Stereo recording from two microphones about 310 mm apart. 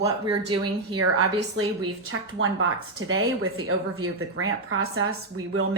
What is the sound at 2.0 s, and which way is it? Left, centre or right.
Speech, right.